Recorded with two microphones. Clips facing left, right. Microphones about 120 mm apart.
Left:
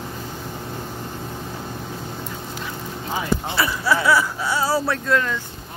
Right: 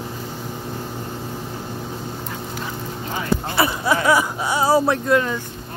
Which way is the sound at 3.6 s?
20° right (ahead or behind).